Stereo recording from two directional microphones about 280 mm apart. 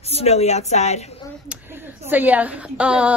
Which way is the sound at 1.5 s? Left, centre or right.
Centre.